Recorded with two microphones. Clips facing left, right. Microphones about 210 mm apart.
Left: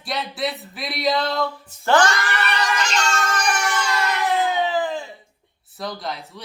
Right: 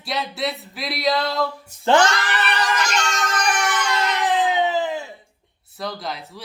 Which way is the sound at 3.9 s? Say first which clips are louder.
Right 1 dB; 20° right (ahead or behind).